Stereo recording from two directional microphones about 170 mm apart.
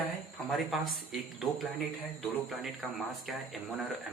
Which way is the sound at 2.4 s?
Centre (ahead or behind).